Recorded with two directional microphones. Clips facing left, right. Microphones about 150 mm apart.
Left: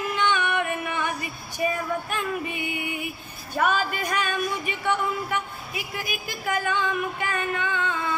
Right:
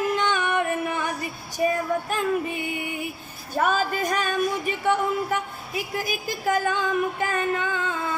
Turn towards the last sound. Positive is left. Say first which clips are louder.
# right 1 dB
turn(degrees=-40)  # may be behind; listen again after turning